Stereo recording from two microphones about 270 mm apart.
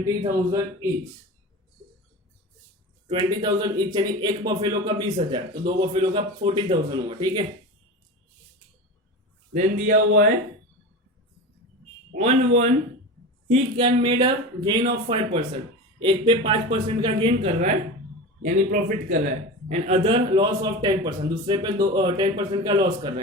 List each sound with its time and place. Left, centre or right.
0.3 s speech: centre
3.1 s speech: centre
9.5 s speech: right
12.1 s speech: right